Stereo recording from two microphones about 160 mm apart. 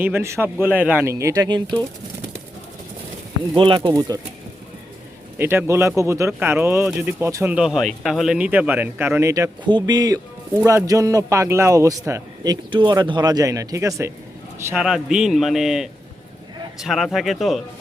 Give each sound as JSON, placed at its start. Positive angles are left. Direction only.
{"t": 0.0, "sound": "speech", "side_deg": -15}
{"t": 3.5, "sound": "a man's voice", "side_deg": -30}
{"t": 5.4, "sound": "speech", "side_deg": -15}
{"t": 7.5, "sound": "a man's voice", "side_deg": -5}
{"t": 14.7, "sound": "a man's voice", "side_deg": -5}